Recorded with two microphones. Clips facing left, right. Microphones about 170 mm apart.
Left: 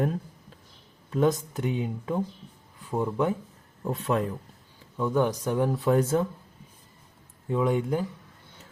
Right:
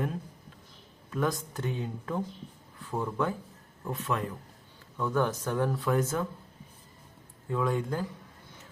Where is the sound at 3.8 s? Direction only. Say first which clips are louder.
Left 5 dB; 35° left (ahead or behind).